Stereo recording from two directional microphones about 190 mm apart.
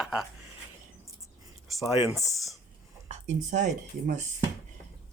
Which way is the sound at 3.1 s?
40° right (ahead or behind).